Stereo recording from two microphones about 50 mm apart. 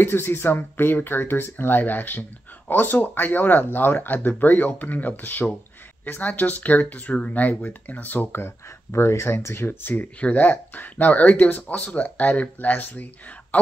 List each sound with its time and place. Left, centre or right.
0.0 s speech: left
8.3 s speech: left
9.9 s speech: left